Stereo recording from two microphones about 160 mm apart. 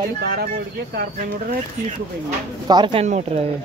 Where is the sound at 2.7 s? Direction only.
30° right (ahead or behind).